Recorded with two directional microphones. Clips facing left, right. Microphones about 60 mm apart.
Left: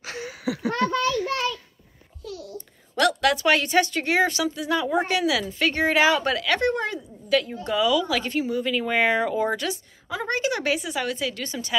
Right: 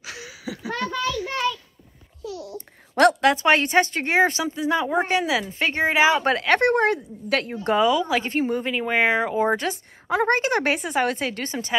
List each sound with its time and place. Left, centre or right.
0.0 s a sound: left
0.5 s a sound: left
2.9 s speech: right
6.2 s a woman's voice: right
7.6 s a woman's voice: right
8.7 s speech: right
10.0 s a woman's voice: right